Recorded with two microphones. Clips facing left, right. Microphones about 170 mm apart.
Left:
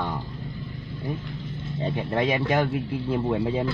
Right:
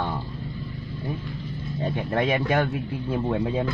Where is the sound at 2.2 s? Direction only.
10° left (ahead or behind).